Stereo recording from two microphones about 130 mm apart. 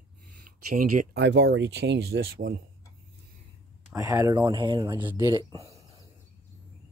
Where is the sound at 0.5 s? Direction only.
90° right.